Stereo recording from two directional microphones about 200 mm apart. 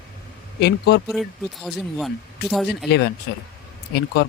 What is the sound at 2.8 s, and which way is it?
Speech, 55° left (ahead or behind).